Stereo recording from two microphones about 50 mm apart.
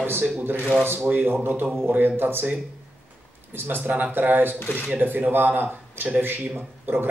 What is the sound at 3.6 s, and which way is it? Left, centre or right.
Speech, right.